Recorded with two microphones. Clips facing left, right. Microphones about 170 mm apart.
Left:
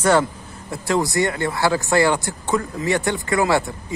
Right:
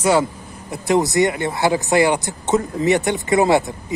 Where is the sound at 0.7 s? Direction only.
20° right (ahead or behind).